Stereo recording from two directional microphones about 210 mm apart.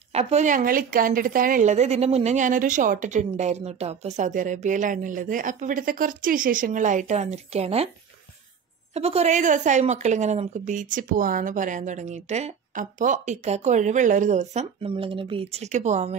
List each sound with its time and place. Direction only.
0.1 s a woman's voice: 30° right (ahead or behind)
8.9 s a woman's voice: 30° right (ahead or behind)